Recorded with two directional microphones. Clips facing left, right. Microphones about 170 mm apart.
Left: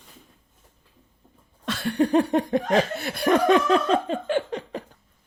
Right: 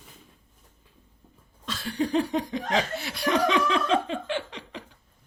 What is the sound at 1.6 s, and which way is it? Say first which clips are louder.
Laughter: left 6 dB; 60° left (ahead or behind).